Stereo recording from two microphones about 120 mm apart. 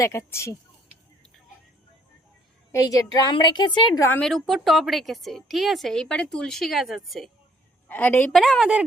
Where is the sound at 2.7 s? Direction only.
30° left (ahead or behind).